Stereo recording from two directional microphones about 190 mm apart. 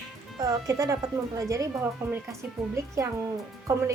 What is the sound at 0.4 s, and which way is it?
A woman's voice, 20° right (ahead or behind).